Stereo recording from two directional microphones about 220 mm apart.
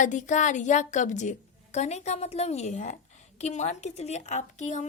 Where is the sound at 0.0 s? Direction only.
35° left (ahead or behind).